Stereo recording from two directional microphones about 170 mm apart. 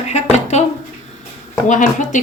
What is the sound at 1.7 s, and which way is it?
Speech, 45° left (ahead or behind).